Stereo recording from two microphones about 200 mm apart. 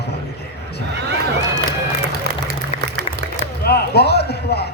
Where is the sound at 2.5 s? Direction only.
50° right (ahead or behind).